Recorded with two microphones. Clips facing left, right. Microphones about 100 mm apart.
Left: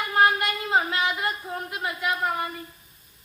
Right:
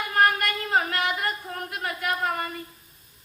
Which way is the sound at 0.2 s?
20° left (ahead or behind).